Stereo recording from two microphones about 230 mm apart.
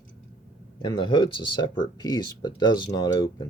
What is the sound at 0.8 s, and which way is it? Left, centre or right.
Speech, left.